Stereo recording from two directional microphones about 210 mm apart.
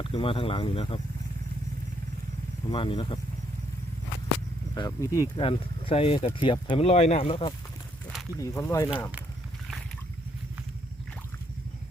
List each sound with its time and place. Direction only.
0.0 s speech: 25° left (ahead or behind)
2.6 s speech: 25° left (ahead or behind)
4.7 s speech: 15° left (ahead or behind)
5.4 s speech: 25° left (ahead or behind)
8.4 s speech: 15° left (ahead or behind)